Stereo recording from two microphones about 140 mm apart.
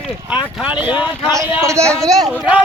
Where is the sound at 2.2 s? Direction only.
5° right (ahead or behind).